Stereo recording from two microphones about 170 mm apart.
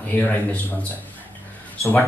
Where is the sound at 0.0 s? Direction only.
10° left (ahead or behind).